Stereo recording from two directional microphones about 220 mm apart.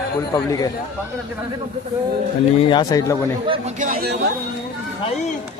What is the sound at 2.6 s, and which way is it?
Speech, 20° left (ahead or behind).